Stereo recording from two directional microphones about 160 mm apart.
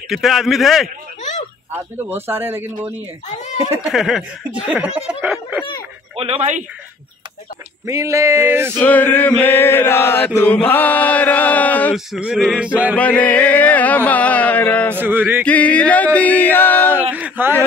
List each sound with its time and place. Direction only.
0.1 s male singing: centre (ahead or behind)
2.0 s speech: 15° right (ahead or behind)
3.7 s speech: 5° right (ahead or behind)
6.1 s speech: 40° right (ahead or behind)
7.8 s speech: 20° right (ahead or behind)
8.7 s chant: 10° left (ahead or behind)
11.9 s male singing: 5° right (ahead or behind)
12.9 s chant: 10° left (ahead or behind)
15.0 s speech: 10° right (ahead or behind)
15.4 s chant: 10° left (ahead or behind)
16.9 s a sound: 10° right (ahead or behind)